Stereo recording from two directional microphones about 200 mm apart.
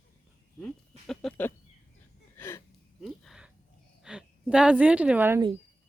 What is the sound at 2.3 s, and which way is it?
Gasp, 10° left (ahead or behind).